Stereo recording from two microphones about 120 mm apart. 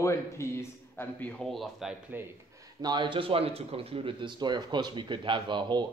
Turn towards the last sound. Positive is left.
turn(degrees=-40)  # may be behind; listen again after turning